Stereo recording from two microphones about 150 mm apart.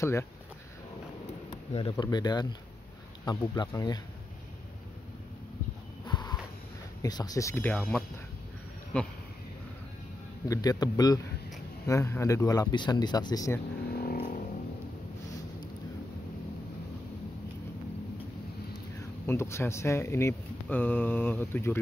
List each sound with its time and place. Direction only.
0.0 s speech: 20° left (ahead or behind)
1.7 s speech: 35° left (ahead or behind)
6.0 s a sound: 30° left (ahead or behind)
7.0 s speech: 25° left (ahead or behind); by 9.1 s 5° left (ahead or behind)
10.5 s speech: 25° left (ahead or behind)
13.9 s vehicle: 80° left
18.9 s speech: 15° left (ahead or behind)